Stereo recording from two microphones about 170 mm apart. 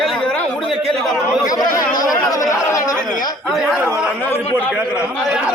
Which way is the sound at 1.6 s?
25° left (ahead or behind).